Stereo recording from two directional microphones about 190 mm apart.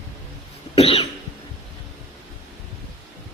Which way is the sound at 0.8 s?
30° left (ahead or behind).